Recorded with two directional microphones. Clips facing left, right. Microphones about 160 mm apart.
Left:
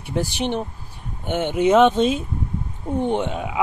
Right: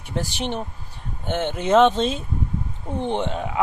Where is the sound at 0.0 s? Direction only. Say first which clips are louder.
Left 4 dB; 15° left (ahead or behind).